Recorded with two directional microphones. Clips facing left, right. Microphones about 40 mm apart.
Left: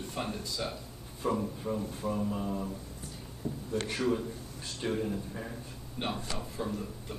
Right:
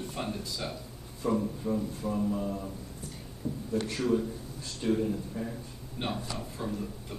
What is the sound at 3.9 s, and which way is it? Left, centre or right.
A man's voice, centre.